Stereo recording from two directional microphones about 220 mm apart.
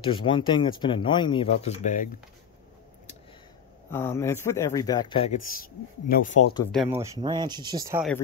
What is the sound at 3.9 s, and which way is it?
Speech, 10° left (ahead or behind).